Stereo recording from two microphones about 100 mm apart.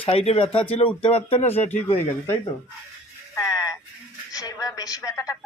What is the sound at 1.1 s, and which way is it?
Speech, 85° left.